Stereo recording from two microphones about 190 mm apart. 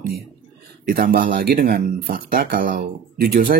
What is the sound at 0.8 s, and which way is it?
Speech, 50° right (ahead or behind).